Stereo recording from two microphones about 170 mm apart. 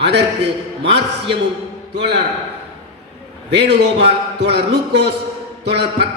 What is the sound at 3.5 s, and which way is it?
A man's voice, 80° right.